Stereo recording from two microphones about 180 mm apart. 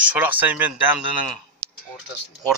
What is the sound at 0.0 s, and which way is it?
Speech, 10° right (ahead or behind).